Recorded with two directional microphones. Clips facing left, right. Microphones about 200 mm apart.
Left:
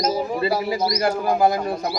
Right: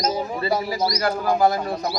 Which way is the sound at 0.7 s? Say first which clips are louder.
Left 2 dB; 25° left (ahead or behind).